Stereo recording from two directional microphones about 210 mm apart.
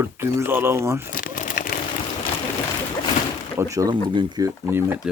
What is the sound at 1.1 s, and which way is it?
Crumpling, 40° left (ahead or behind).